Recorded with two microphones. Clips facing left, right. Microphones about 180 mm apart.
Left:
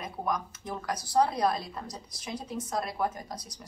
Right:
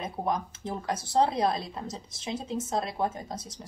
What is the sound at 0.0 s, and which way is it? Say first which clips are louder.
A woman's voice: right 2 dB; 25° right (ahead or behind).